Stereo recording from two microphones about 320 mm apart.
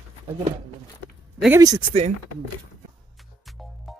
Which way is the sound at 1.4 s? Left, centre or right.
Centre.